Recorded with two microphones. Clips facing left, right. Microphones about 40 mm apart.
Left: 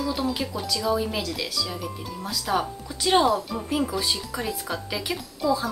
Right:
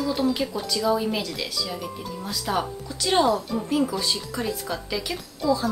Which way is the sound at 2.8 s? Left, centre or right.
Centre.